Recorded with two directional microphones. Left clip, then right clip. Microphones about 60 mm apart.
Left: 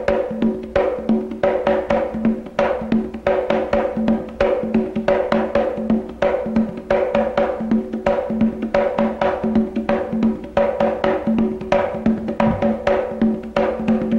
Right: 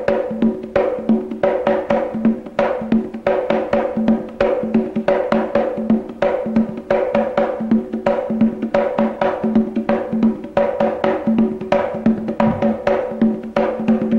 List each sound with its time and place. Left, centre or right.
0.0 s music: right